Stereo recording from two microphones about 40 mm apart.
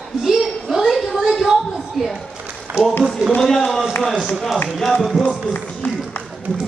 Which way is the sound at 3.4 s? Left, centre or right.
Centre.